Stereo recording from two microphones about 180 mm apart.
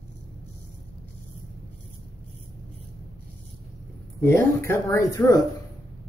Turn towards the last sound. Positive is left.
turn(degrees=20)  # may be behind; listen again after turning